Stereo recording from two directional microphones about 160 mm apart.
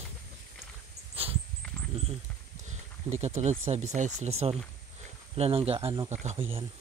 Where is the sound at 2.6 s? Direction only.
45° right (ahead or behind).